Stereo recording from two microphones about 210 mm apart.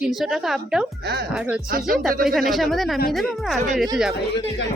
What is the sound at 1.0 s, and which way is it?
Speech, 50° right (ahead or behind).